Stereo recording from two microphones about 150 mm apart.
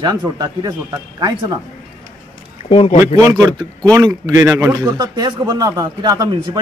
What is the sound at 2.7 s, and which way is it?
Speech, 45° left (ahead or behind).